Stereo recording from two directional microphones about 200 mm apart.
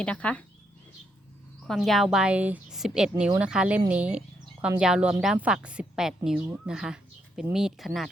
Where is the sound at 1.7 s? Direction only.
Centre (ahead or behind).